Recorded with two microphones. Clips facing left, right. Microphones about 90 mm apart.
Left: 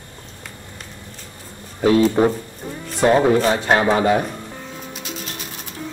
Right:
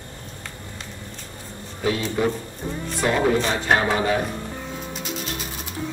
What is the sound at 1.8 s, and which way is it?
Speech, 40° left (ahead or behind).